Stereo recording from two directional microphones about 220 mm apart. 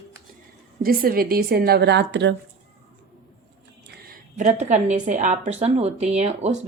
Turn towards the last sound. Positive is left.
turn(degrees=-30)  # may be behind; listen again after turning